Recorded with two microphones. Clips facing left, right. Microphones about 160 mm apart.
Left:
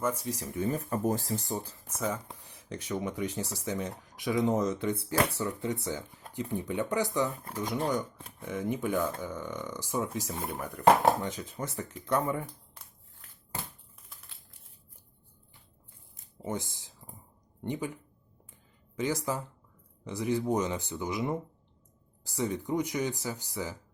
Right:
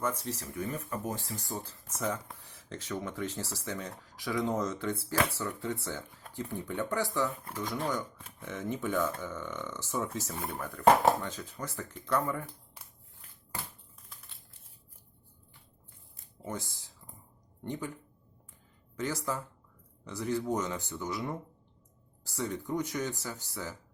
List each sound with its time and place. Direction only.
0.0 s speech: 10° left (ahead or behind)
0.6 s speech: 35° left (ahead or behind)
1.5 s speech: 15° left (ahead or behind)
2.1 s speech: 25° left (ahead or behind)
16.1 s a sound: 20° left (ahead or behind)
17.6 s speech: 15° left (ahead or behind)